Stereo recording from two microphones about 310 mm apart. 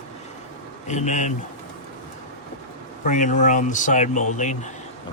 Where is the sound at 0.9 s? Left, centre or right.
Left.